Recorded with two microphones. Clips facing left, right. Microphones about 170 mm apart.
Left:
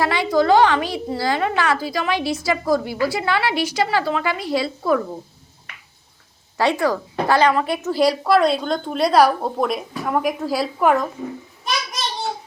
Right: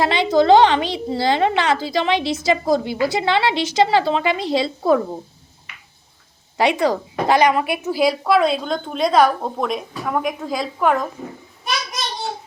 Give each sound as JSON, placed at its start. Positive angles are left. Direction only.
{"t": 0.0, "sound": "a woman's voice", "side_deg": -20}
{"t": 6.6, "sound": "speech", "side_deg": -15}